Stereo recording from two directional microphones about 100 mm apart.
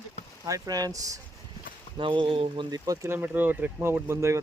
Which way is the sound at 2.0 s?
55° right (ahead or behind).